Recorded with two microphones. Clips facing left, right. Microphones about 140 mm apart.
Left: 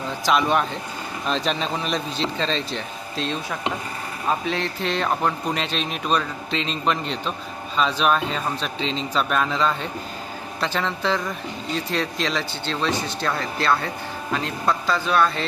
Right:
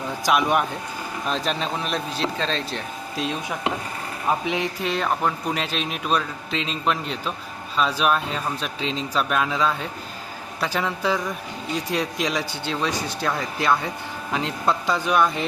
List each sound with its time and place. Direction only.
0.3 s a man's voice: 10° right (ahead or behind)